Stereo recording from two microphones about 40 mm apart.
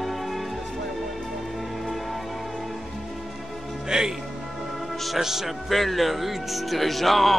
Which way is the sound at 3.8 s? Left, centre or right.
Centre.